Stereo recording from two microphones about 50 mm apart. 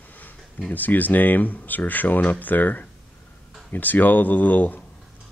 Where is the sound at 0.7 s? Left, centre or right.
Left.